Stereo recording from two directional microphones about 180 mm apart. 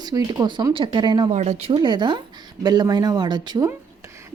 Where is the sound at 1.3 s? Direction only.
40° right (ahead or behind).